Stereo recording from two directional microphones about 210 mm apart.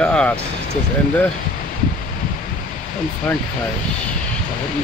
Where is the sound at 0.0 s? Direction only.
5° left (ahead or behind).